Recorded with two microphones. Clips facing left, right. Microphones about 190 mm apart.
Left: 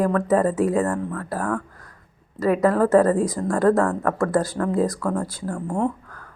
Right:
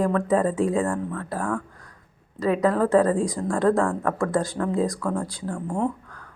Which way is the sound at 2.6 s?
5° left (ahead or behind).